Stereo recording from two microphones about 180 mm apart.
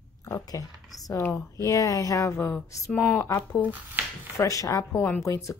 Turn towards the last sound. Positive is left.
turn(degrees=15)  # may be behind; listen again after turning